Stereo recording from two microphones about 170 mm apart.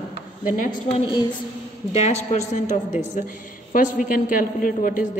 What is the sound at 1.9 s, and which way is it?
A woman's voice, 40° left (ahead or behind).